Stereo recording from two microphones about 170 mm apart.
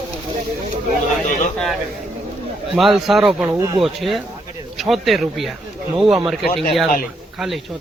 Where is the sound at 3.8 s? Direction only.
Centre (ahead or behind).